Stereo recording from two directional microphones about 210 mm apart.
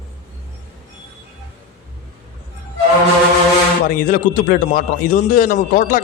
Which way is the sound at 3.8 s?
40° left (ahead or behind).